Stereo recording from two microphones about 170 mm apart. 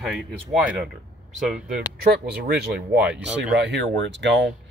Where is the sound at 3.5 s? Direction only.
90° right.